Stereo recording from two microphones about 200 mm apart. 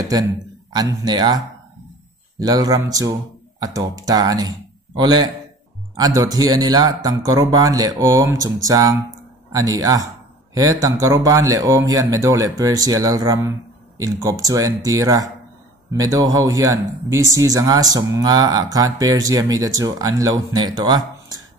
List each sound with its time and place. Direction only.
0.0 s speech: 20° right (ahead or behind)